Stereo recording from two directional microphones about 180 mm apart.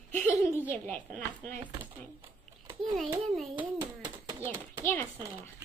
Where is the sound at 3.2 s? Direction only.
Centre (ahead or behind).